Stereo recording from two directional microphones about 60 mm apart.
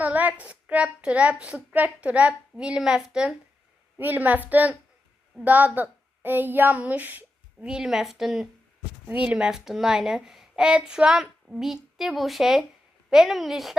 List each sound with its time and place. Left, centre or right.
0.0 s a sound: right
0.4 s a child's voice: centre
3.9 s a child's voice: right
7.6 s a child's voice: centre
9.0 s a child's voice: right
9.5 s a child's voice: centre